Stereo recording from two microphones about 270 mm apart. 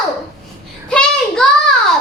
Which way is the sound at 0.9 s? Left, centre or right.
Centre.